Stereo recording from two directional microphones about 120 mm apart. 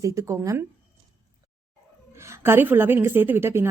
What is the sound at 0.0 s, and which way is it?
Speech, 25° right (ahead or behind).